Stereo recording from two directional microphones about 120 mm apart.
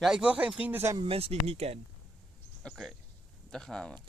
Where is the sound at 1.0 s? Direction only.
55° right (ahead or behind).